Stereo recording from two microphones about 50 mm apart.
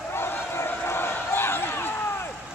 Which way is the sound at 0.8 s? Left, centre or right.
Left.